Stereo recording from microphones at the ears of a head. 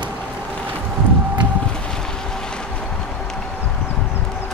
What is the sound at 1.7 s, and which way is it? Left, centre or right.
Boat, centre.